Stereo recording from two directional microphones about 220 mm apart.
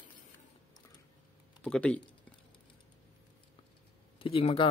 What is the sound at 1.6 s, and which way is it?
Speech, 5° left (ahead or behind).